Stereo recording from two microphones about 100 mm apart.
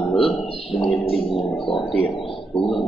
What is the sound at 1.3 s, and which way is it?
Speech, 60° left (ahead or behind).